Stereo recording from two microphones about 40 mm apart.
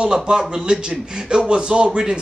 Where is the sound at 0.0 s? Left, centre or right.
Centre.